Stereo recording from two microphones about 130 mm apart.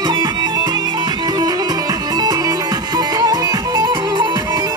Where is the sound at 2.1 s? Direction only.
30° right (ahead or behind).